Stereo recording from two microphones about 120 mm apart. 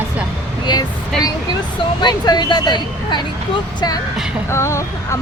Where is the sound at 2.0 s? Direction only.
35° left (ahead or behind).